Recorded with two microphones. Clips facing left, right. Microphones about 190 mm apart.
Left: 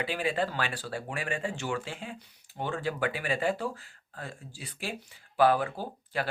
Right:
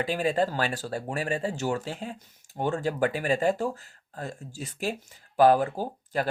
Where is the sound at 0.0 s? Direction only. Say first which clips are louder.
Right 4 dB; 40° right (ahead or behind).